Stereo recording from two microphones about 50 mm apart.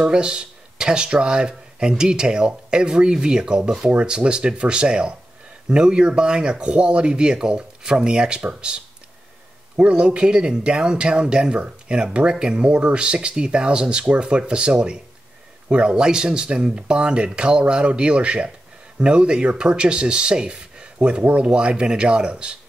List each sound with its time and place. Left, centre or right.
0.0 s speech: centre